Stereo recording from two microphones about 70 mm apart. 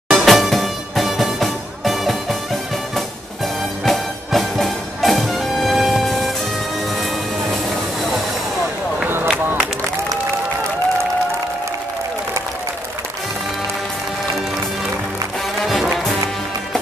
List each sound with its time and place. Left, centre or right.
0.1 s music: centre
3.8 s music: centre
15.6 s music: centre